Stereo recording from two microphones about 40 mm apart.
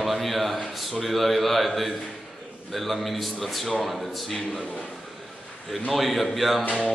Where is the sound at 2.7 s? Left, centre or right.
Centre.